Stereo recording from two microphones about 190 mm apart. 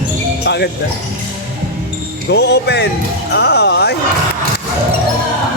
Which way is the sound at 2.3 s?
60° left (ahead or behind).